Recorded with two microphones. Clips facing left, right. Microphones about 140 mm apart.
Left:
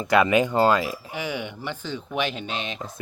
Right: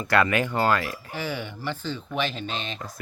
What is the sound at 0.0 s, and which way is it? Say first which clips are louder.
Speech: left 3 dB; 20° left (ahead or behind).